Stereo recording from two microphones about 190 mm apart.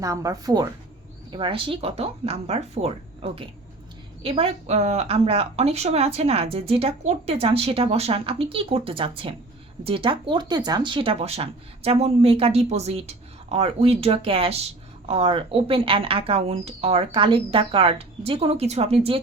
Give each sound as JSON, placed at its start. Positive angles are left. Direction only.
{"t": 0.0, "sound": "speech", "side_deg": -15}